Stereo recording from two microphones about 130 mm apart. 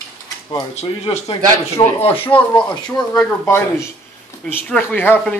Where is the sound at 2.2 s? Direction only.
10° left (ahead or behind).